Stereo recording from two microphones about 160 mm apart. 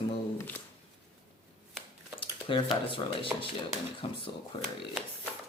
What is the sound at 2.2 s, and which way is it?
Speech, 30° left (ahead or behind).